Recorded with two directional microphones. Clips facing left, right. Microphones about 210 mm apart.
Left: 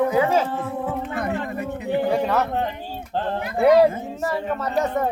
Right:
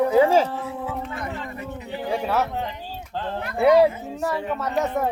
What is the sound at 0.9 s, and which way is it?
Speech, 55° left (ahead or behind).